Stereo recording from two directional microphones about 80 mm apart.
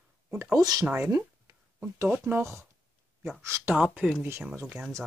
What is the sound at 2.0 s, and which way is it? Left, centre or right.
Speech, right.